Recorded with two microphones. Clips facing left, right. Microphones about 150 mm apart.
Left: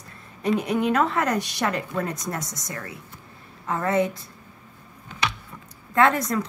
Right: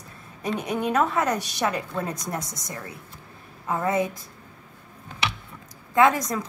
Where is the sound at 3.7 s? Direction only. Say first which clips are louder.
Even; 15° right (ahead or behind).